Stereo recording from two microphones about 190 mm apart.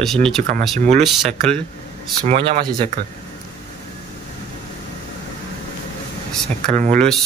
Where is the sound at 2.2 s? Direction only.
35° right (ahead or behind).